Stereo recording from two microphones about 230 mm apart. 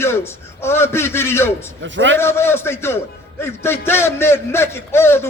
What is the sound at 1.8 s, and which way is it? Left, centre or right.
Speech, right.